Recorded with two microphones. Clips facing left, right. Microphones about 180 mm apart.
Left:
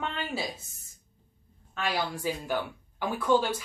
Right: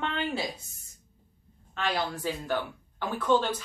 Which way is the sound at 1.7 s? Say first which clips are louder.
Right 1 dB; 10° left (ahead or behind).